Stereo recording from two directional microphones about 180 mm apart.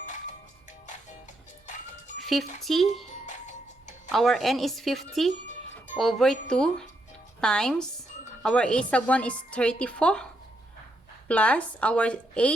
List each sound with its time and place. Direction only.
0.0 s music: 40° left (ahead or behind)
2.1 s music: centre (ahead or behind)
2.6 s a woman's voice: centre (ahead or behind)
3.1 s music: 40° left (ahead or behind)
4.1 s a woman's voice: centre (ahead or behind)
11.3 s a woman's voice: 5° left (ahead or behind)